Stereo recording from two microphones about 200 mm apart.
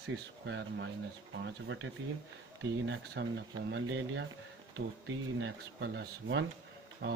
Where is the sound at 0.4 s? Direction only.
65° right (ahead or behind).